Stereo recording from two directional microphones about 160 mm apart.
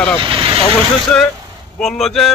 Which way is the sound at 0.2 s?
30° right (ahead or behind).